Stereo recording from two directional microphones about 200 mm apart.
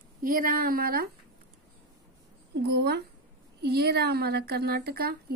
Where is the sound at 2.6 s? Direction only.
55° right (ahead or behind).